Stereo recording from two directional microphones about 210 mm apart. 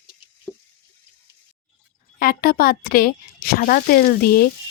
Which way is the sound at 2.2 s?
45° left (ahead or behind).